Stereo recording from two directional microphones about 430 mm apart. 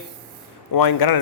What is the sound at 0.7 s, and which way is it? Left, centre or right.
Speech, left.